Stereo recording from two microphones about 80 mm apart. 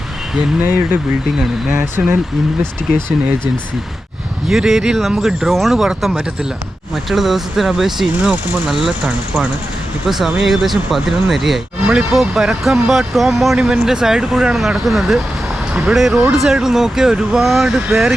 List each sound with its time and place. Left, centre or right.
0.6 s speech: right
2.0 s speech: centre
4.4 s speech: centre